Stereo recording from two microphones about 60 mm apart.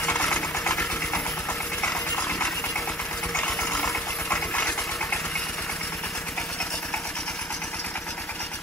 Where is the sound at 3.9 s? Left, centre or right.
Left.